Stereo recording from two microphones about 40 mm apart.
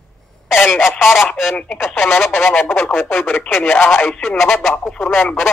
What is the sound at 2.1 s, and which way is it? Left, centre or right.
Speech, left.